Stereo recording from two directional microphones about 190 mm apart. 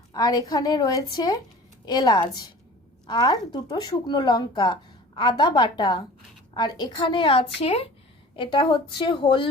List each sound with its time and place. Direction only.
0.1 s a woman's voice: 20° left (ahead or behind)